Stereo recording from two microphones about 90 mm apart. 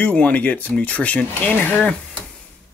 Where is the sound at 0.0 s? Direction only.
15° left (ahead or behind).